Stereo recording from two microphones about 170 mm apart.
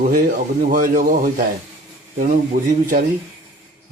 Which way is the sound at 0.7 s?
55° right (ahead or behind).